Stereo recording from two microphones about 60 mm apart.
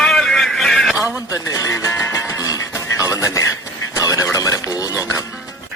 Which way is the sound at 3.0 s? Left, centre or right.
Left.